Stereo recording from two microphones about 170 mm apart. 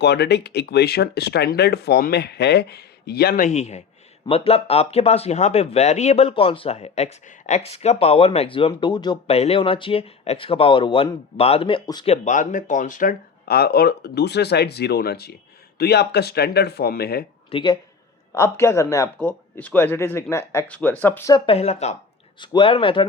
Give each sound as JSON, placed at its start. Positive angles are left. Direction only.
{"t": 0.0, "sound": "speech", "side_deg": 80}
{"t": 3.4, "sound": "speech", "side_deg": 40}
{"t": 12.0, "sound": "speech", "side_deg": 40}
{"t": 17.5, "sound": "speech", "side_deg": 25}
{"t": 18.3, "sound": "speech", "side_deg": 15}
{"t": 21.3, "sound": "speech", "side_deg": 35}
{"t": 22.4, "sound": "speech", "side_deg": 30}